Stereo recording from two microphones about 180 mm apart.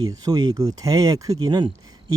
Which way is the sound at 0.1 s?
20° right (ahead or behind).